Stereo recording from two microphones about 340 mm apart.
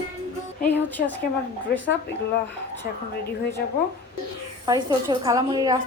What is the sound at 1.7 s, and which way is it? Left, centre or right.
Speech, left.